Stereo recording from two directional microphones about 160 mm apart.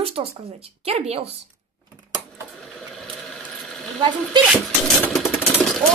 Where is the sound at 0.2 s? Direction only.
35° right (ahead or behind).